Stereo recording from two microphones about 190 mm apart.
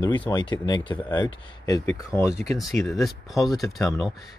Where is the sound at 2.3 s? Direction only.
Centre (ahead or behind).